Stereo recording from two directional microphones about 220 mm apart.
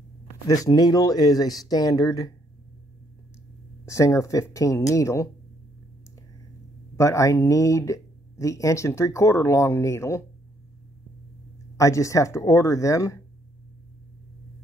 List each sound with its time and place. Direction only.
0.5 s speech: 15° left (ahead or behind)
3.8 s speech: 15° left (ahead or behind)
7.0 s speech: 15° left (ahead or behind)
11.7 s speech: 15° left (ahead or behind)